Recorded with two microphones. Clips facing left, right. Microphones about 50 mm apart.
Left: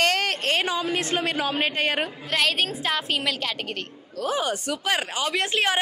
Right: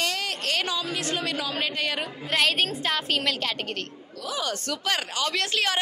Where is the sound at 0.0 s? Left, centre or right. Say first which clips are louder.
Left 6 dB; left.